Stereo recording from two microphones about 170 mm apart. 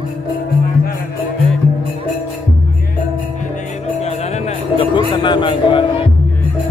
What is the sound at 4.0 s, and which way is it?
Music, 40° left (ahead or behind).